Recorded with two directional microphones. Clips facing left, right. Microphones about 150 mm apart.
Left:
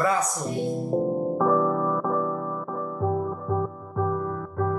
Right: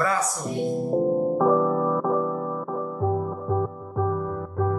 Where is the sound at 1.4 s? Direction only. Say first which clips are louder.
Even; 15° right (ahead or behind).